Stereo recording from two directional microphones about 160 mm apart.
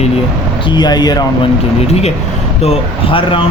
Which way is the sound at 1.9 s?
40° left (ahead or behind).